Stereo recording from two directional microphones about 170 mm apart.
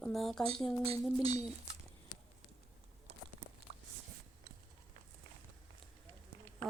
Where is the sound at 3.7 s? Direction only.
40° right (ahead or behind).